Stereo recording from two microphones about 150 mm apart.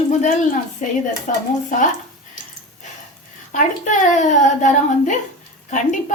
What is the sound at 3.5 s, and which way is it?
A woman's voice, 60° left (ahead or behind).